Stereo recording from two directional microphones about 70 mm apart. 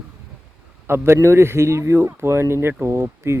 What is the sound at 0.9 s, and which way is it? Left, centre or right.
Speech, right.